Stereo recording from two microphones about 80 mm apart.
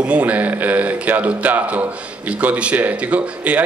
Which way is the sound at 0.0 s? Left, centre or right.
Centre.